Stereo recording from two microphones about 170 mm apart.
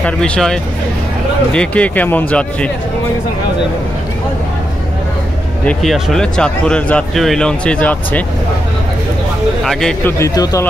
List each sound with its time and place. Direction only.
0.0 s speech: 5° left (ahead or behind)
5.7 s speech: centre (ahead or behind)
9.7 s speech: 5° left (ahead or behind)
10.1 s speech: 20° left (ahead or behind)